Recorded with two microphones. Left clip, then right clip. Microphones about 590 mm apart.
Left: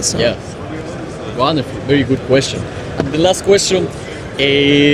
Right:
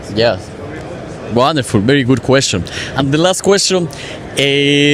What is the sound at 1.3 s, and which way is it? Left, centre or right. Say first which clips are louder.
Speech: right 4 dB; right.